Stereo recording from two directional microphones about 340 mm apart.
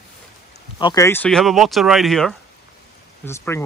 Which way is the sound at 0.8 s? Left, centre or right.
Centre.